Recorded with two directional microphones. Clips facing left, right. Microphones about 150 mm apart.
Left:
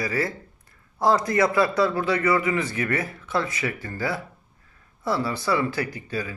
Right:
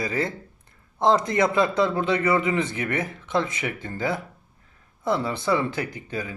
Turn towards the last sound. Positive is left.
turn(degrees=-20)  # may be behind; listen again after turning